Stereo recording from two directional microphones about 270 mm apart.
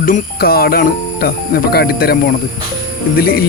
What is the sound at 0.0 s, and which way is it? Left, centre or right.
Speech, left.